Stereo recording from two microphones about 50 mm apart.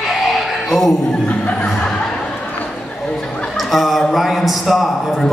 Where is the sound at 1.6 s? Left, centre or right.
Centre.